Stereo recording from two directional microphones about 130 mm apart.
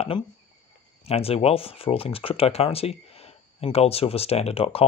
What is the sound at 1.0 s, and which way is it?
Speech, 50° left (ahead or behind).